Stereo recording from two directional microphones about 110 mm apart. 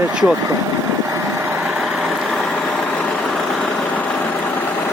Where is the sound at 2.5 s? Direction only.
10° left (ahead or behind).